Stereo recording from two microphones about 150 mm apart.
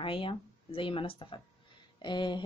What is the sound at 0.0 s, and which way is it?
Speech, 35° left (ahead or behind).